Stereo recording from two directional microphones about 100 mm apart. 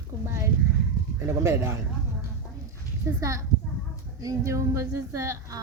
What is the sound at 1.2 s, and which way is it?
Speech, 30° right (ahead or behind).